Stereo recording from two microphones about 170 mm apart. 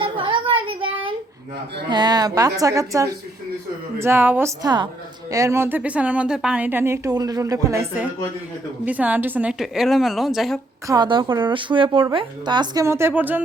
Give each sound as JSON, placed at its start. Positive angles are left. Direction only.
{"t": 0.0, "sound": "child singing", "side_deg": -30}
{"t": 1.9, "sound": "a woman's voice", "side_deg": -25}
{"t": 10.8, "sound": "a woman's voice", "side_deg": -25}